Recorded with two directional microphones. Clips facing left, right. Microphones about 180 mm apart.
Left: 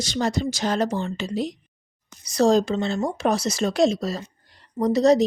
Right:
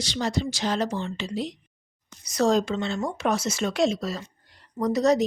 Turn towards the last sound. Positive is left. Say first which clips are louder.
# left 4 dB
turn(degrees=30)  # may be behind; listen again after turning